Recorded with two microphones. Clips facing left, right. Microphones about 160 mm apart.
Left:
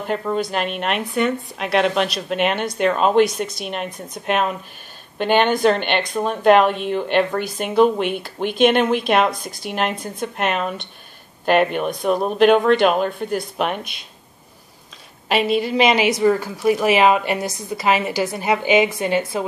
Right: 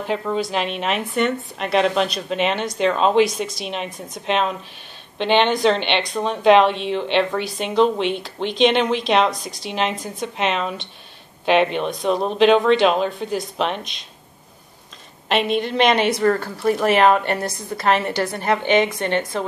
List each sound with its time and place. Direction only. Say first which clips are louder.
0.0 s speech: left 1 dB; centre (ahead or behind)
15.2 s a woman's voice: left 1 dB; 5° left (ahead or behind)